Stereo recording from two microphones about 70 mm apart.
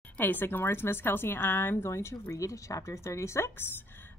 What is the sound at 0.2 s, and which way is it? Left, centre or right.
A woman's voice, left.